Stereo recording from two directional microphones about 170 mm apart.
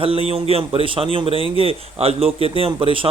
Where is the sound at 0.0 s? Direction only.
35° right (ahead or behind).